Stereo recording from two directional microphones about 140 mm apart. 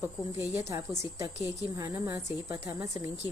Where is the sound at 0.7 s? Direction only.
20° right (ahead or behind).